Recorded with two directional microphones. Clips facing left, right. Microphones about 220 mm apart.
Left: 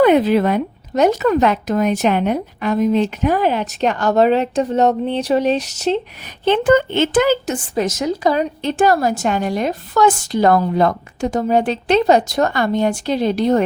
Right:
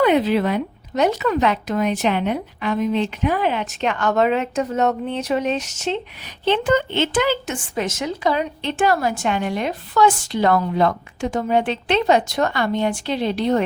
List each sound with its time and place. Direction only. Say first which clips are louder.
0.0 s speech: left 4 dB; 45° left (ahead or behind)
6.4 s a woman's voice: left 5 dB; 50° left (ahead or behind)